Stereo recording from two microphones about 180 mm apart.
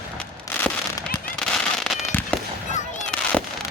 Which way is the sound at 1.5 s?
Centre (ahead or behind).